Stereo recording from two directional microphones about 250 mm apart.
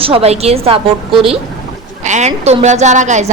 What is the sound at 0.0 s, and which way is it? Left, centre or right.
A woman's voice, right.